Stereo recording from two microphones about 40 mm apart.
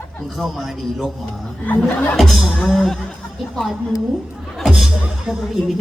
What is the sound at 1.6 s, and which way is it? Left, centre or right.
Speech, left.